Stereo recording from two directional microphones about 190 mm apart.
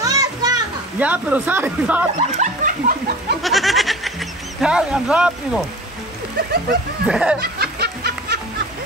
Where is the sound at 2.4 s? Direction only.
45° right (ahead or behind).